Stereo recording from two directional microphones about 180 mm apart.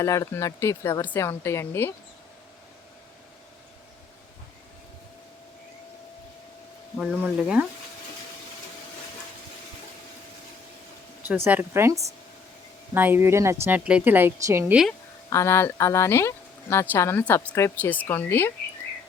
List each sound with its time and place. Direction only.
0.0 s speech: 15° left (ahead or behind)
6.9 s speech: 5° right (ahead or behind)
11.4 s a woman's voice: 15° right (ahead or behind)
15.3 s speech: 15° left (ahead or behind)